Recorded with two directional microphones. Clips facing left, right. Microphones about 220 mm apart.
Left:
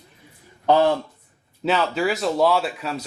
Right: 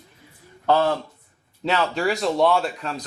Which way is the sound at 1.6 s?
Centre (ahead or behind).